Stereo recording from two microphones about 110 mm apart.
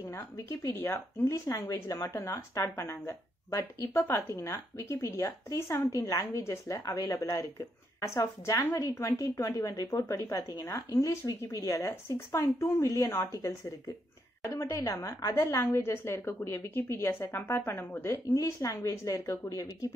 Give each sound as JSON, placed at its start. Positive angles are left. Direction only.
{"t": 0.1, "sound": "a woman's voice", "side_deg": 25}